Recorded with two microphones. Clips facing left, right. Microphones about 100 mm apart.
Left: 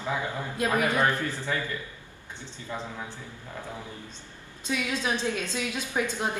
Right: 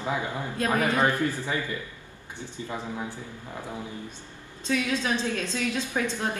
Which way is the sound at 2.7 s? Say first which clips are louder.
Right 2 dB; 15° right (ahead or behind).